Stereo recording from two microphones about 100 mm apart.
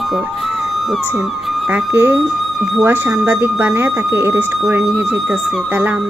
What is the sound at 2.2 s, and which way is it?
Speech, centre (ahead or behind).